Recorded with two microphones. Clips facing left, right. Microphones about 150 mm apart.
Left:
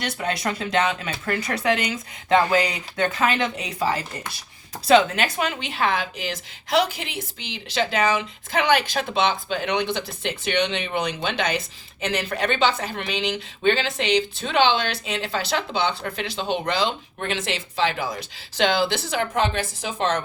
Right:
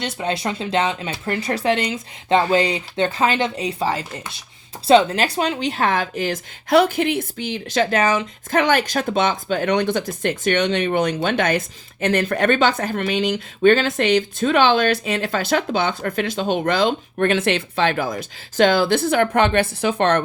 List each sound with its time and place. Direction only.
0.0 s a woman's voice: 25° right (ahead or behind); by 20.2 s 60° right (ahead or behind)